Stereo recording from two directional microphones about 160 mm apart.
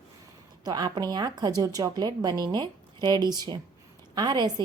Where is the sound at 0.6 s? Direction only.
25° right (ahead or behind).